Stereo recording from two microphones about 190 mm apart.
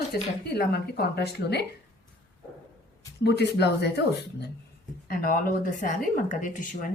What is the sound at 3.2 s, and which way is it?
Speech, 60° left (ahead or behind).